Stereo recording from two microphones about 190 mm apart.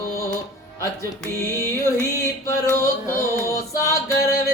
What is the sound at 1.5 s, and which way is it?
Music, 15° left (ahead or behind).